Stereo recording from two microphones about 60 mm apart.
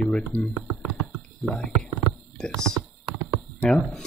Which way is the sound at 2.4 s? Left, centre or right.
Centre.